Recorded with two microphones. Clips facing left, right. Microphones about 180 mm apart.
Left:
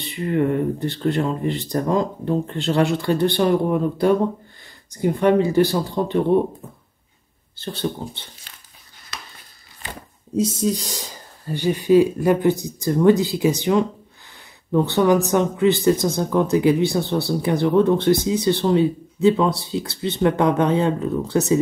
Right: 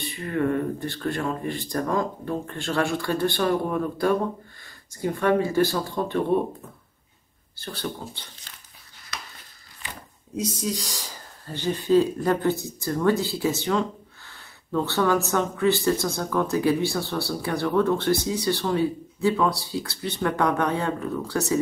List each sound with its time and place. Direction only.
0.0 s speech: 20° left (ahead or behind)
7.5 s speech: 25° left (ahead or behind)
10.3 s speech: 25° left (ahead or behind)